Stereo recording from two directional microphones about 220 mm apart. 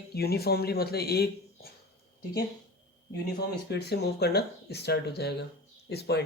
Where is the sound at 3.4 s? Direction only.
50° left (ahead or behind).